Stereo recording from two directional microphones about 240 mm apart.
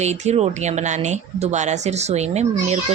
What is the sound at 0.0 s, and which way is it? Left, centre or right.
Speech, right.